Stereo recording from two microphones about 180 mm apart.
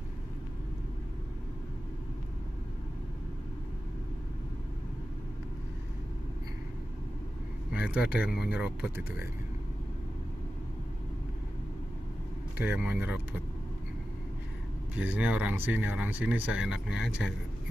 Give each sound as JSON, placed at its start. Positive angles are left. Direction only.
{"t": 7.7, "sound": "speech", "side_deg": -5}
{"t": 12.5, "sound": "speech", "side_deg": -10}
{"t": 15.0, "sound": "speech", "side_deg": -10}